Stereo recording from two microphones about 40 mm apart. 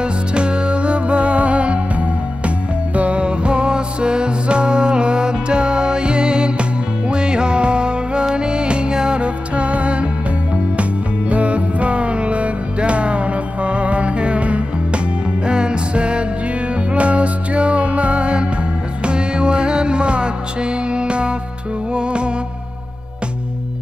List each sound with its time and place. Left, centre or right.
0.0 s music: right